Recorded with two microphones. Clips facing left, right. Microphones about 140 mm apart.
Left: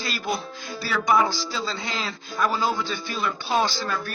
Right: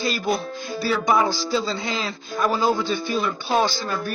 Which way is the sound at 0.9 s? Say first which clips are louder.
Right 1 dB; 25° right (ahead or behind).